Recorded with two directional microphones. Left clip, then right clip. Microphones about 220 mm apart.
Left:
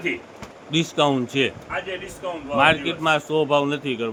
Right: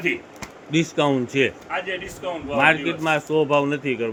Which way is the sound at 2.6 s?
5° left (ahead or behind).